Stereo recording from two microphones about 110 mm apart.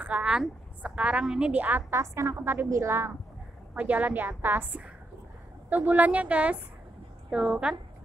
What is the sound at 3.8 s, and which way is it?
A woman's voice, 15° right (ahead or behind).